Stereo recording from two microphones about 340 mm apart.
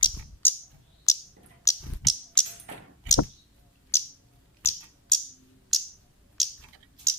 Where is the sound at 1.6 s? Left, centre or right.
Centre.